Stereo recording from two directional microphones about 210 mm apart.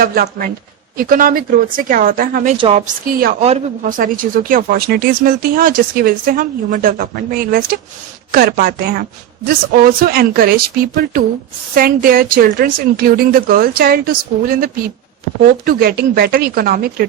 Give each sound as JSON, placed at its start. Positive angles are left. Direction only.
{"t": 0.0, "sound": "a woman's voice", "side_deg": -45}
{"t": 2.6, "sound": "a woman's voice", "side_deg": -30}